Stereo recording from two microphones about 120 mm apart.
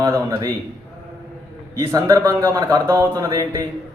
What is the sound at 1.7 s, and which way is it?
Speech, 30° right (ahead or behind).